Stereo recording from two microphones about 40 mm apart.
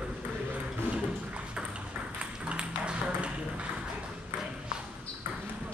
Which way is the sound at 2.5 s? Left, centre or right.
Right.